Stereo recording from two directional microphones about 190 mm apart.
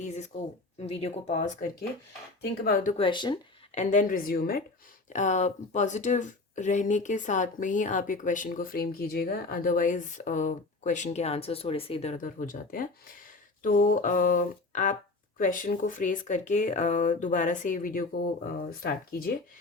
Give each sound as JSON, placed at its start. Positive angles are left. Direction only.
{"t": 0.8, "sound": "speech", "side_deg": 35}
{"t": 3.0, "sound": "speech", "side_deg": 25}
{"t": 3.8, "sound": "speech", "side_deg": 45}
{"t": 5.0, "sound": "speech", "side_deg": 40}